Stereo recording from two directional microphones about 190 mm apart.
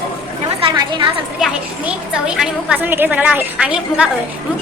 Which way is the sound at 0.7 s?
25° right (ahead or behind).